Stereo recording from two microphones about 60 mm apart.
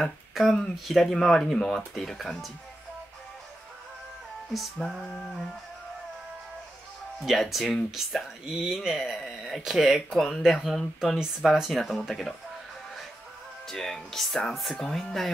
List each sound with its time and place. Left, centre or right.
0.3 s a sound: centre
0.8 s speech: centre
4.8 s speech: centre
7.2 s speech: centre
11.1 s speech: centre
13.7 s speech: centre